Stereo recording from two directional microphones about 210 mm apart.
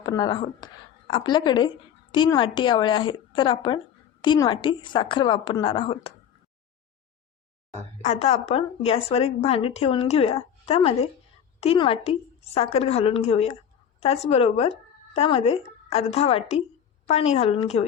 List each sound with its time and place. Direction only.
0.0 s a woman's voice: 20° left (ahead or behind)
8.0 s a woman's voice: 30° left (ahead or behind)